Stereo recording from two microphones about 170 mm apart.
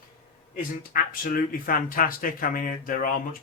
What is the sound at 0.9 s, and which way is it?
Speech, 55° left (ahead or behind).